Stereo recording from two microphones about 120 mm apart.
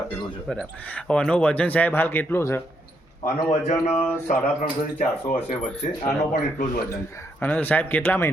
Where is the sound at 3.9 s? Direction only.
15° left (ahead or behind).